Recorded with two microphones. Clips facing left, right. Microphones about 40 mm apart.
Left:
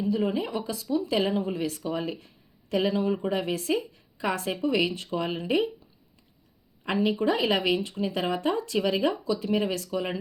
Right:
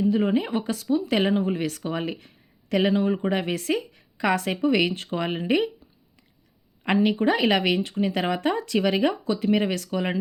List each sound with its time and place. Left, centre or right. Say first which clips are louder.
0.1 s speech: right 4 dB; right
1.3 s speech: right 4 dB; right
1.8 s speech: right 2 dB; right
2.9 s speech: right 3 dB; right
3.2 s speech: right 3 dB; right
3.5 s a woman's voice: right 1 dB; right
6.8 s speech: right 4 dB; right
9.6 s a woman's voice: right 3 dB; right
9.9 s speech: right 3 dB; right